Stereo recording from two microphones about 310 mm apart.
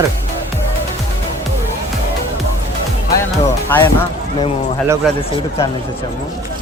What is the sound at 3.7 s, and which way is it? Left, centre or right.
Speech, centre.